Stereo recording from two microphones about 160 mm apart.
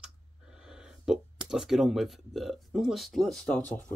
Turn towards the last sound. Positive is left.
turn(degrees=5)  # may be behind; listen again after turning